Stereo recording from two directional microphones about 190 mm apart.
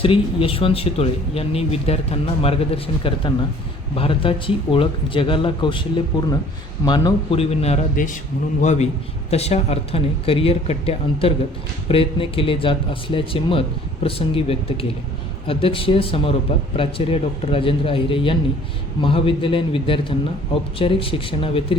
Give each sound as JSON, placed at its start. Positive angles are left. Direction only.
{"t": 0.0, "sound": "speech", "side_deg": 30}